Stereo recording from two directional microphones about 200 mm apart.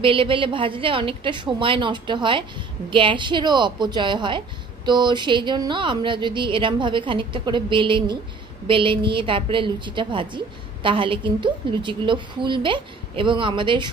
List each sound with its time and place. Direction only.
0.0 s a woman's voice: 25° right (ahead or behind)